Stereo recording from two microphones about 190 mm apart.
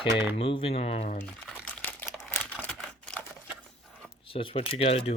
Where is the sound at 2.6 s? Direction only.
5° left (ahead or behind).